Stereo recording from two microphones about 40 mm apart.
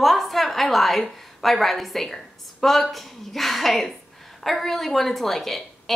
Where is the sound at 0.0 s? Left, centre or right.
Centre.